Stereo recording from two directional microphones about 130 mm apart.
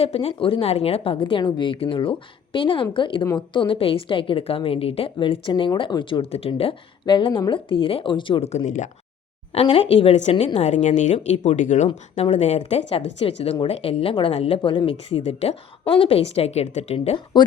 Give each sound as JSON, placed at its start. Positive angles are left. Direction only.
{"t": 0.0, "sound": "a woman's voice", "side_deg": 50}
{"t": 8.5, "sound": "speech", "side_deg": 65}
{"t": 9.6, "sound": "speech", "side_deg": 45}
{"t": 10.6, "sound": "speech", "side_deg": 70}
{"t": 12.1, "sound": "speech", "side_deg": 60}
{"t": 17.4, "sound": "a woman's voice", "side_deg": 35}